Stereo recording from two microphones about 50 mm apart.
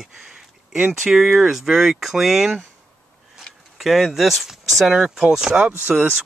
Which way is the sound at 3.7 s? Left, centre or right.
Centre.